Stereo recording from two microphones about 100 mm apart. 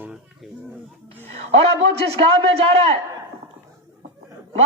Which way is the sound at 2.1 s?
85° right.